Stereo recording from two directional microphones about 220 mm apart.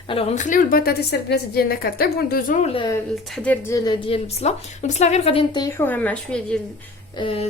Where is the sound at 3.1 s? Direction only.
Centre (ahead or behind).